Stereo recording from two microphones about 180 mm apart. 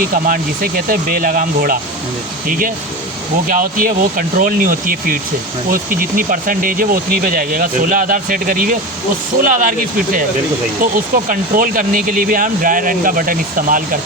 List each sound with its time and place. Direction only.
0.0 s speech: 50° right (ahead or behind)